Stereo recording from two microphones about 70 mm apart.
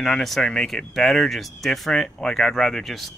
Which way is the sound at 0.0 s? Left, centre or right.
Centre.